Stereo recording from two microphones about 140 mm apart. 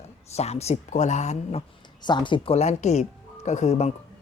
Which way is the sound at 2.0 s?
35° left (ahead or behind).